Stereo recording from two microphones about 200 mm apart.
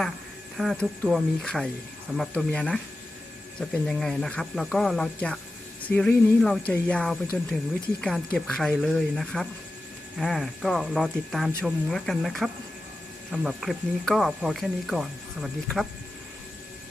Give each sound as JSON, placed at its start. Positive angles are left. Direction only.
{"t": 0.5, "sound": "speech", "side_deg": 0}